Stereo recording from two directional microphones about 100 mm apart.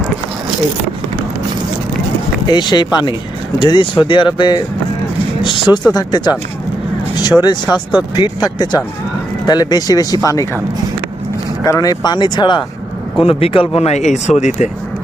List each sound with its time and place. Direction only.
2.5 s speech: 45° left (ahead or behind)
5.4 s a sound: 50° left (ahead or behind)
5.9 s speech: 45° left (ahead or behind)
11.6 s speech: 35° left (ahead or behind)
13.1 s speech: 70° left (ahead or behind); by 14.4 s 90° left